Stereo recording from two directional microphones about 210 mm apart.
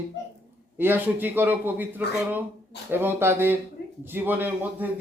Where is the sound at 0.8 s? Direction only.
10° right (ahead or behind).